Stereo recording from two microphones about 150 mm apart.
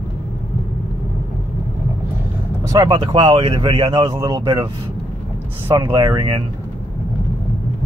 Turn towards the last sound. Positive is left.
turn(degrees=-30)  # may be behind; listen again after turning